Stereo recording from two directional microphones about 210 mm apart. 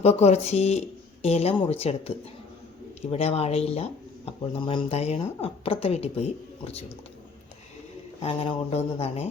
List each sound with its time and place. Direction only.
0.0 s speech: 30° left (ahead or behind)
8.2 s speech: 25° left (ahead or behind)